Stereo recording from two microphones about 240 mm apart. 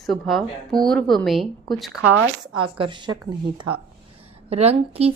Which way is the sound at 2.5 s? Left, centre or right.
Right.